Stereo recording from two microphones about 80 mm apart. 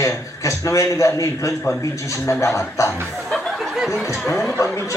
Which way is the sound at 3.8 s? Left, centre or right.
Centre.